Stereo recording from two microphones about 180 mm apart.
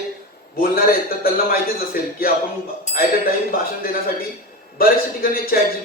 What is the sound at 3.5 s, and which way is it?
A man's voice, 55° left (ahead or behind).